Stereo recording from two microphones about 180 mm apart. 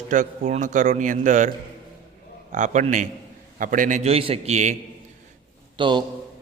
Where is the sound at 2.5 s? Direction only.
45° right (ahead or behind).